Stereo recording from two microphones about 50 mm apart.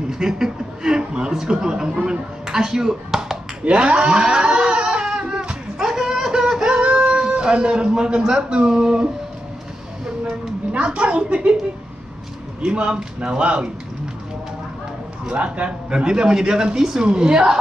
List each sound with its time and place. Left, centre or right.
0.1 s speech: centre
3.6 s a sound: right
8.3 s speech: centre
10.7 s speech: right
12.6 s speech: centre
15.2 s speech: right